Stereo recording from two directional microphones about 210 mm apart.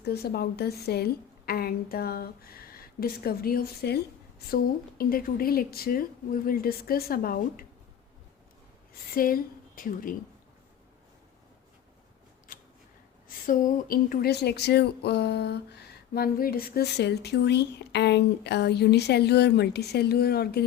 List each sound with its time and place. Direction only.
0.0 s a woman's voice: 50° left (ahead or behind)
9.1 s a woman's voice: 45° left (ahead or behind)
12.5 s scissors: 40° left (ahead or behind)
13.2 s a woman's voice: 40° left (ahead or behind)